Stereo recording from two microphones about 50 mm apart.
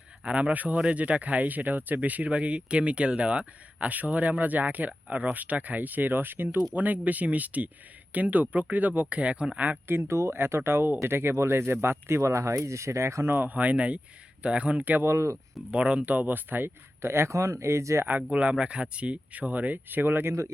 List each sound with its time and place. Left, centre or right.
0.3 s speech: right
6.7 s speech: right
9.8 s speech: right
10.3 s speech: right
13.3 s speech: right
15.0 s speech: right
15.7 s speech: right
16.0 s speech: right
17.0 s speech: right
18.2 s speech: right